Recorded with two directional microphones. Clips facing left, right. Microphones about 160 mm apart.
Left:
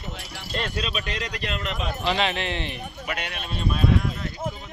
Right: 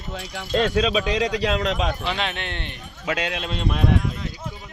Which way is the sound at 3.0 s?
90° right.